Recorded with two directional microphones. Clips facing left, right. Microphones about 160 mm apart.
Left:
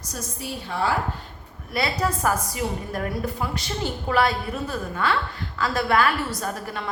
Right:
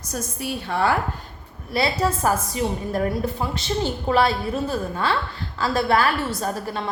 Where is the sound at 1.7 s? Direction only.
30° right (ahead or behind).